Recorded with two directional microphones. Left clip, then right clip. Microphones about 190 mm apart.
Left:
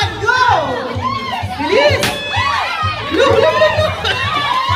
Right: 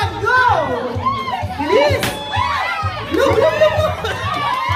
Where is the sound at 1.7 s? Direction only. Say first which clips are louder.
Left 2 dB; 15° right (ahead or behind).